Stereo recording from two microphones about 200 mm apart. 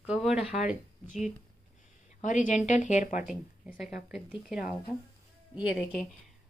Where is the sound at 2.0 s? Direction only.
40° left (ahead or behind).